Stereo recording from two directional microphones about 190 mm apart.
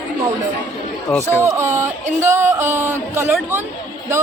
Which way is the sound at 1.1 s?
5° left (ahead or behind).